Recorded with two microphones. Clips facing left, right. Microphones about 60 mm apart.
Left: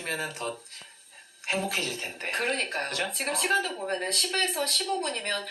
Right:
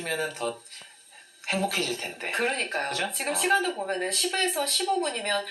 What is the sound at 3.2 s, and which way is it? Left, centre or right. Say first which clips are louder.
Speech: right 2 dB; centre.